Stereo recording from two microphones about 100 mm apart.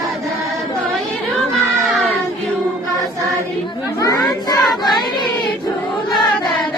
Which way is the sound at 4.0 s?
35° left (ahead or behind).